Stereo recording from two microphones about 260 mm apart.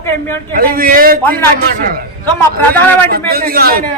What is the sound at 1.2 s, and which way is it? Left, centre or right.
Speech, centre.